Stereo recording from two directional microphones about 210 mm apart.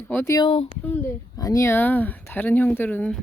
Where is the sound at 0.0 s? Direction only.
10° left (ahead or behind).